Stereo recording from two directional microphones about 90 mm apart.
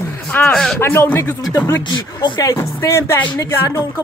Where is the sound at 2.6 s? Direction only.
30° left (ahead or behind).